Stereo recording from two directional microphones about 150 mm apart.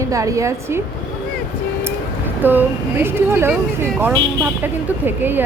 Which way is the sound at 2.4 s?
10° right (ahead or behind).